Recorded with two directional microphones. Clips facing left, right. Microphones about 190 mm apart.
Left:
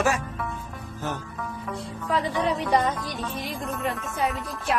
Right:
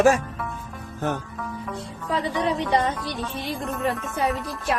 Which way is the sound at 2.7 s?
30° right (ahead or behind).